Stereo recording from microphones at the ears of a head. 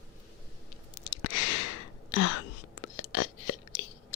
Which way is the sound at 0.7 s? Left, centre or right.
Left.